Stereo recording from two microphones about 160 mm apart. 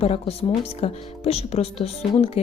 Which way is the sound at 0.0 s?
40° left (ahead or behind).